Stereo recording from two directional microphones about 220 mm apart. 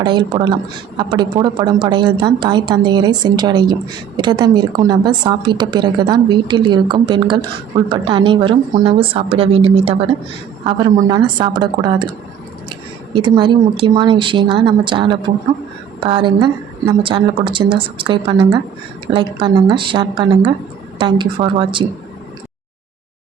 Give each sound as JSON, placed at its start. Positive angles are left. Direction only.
{"t": 0.0, "sound": "a woman's voice", "side_deg": -20}
{"t": 13.1, "sound": "a woman's voice", "side_deg": -20}